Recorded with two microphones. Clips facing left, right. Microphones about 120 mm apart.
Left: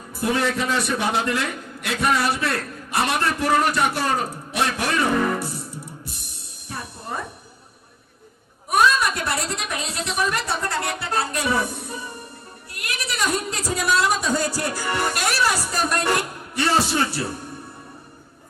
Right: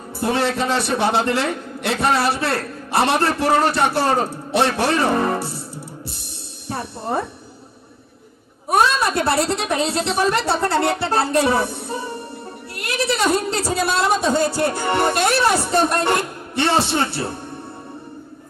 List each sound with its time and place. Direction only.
0.2 s a man's voice: 30° right (ahead or behind)
6.7 s music: 30° right (ahead or behind)
8.7 s a man's voice: 30° right (ahead or behind)